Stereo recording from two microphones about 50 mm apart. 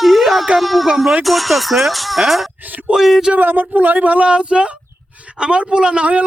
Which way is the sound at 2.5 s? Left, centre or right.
Right.